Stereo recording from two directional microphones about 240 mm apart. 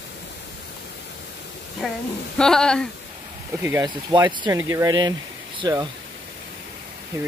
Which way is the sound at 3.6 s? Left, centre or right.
Centre.